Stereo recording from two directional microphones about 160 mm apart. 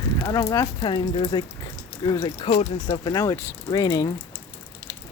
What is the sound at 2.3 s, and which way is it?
Speech, 40° left (ahead or behind).